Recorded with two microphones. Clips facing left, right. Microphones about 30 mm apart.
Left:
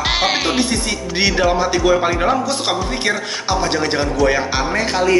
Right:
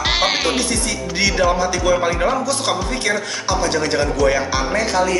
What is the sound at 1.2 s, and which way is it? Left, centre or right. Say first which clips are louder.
Speech: left 1 dB; centre.